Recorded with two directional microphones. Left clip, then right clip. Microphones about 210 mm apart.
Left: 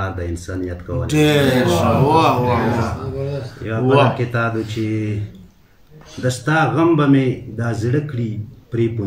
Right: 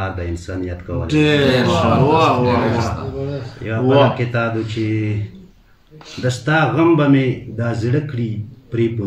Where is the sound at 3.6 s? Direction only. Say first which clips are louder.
Right 1 dB; centre (ahead or behind).